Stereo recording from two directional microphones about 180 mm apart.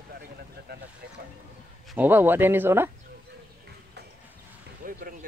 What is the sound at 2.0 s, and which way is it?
Speech, 10° right (ahead or behind).